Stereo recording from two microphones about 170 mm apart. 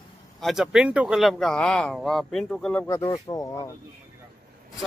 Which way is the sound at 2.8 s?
20° left (ahead or behind).